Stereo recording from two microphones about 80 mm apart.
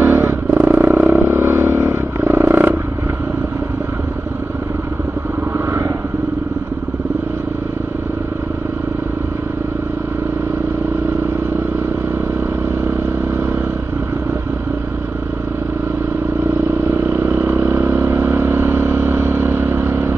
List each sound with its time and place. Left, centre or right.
0.0 s vehicle: right
16.9 s vehicle: right